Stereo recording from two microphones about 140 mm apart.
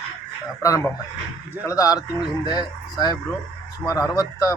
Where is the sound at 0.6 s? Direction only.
25° left (ahead or behind).